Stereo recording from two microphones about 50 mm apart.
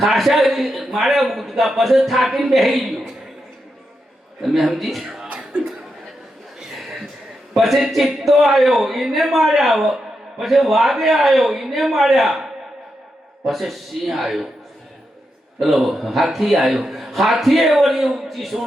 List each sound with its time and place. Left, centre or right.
0.0 s speech: centre
4.4 s speech: centre
5.3 s chuckle: centre
7.5 s speech: centre
15.6 s speech: centre